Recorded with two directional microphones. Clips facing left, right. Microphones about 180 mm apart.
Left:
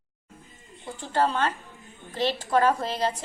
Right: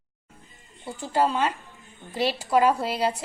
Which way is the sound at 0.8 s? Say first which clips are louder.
Right 1 dB; 10° right (ahead or behind).